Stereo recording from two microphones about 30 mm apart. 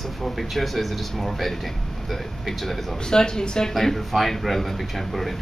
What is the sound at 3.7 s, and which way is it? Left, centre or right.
Speech, centre.